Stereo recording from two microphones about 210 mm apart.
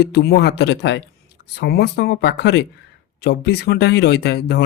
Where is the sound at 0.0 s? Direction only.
50° left (ahead or behind).